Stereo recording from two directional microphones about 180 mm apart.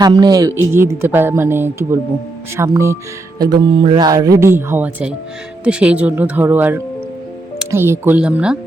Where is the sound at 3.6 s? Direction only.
25° right (ahead or behind).